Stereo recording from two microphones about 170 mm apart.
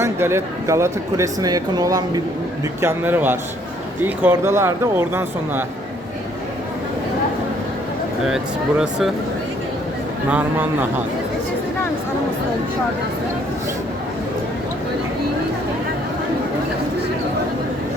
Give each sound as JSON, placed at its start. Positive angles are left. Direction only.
{"t": 0.0, "sound": "speech", "side_deg": -15}
{"t": 10.2, "sound": "speech", "side_deg": -10}